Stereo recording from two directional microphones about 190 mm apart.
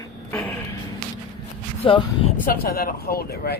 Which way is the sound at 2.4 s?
50° left (ahead or behind).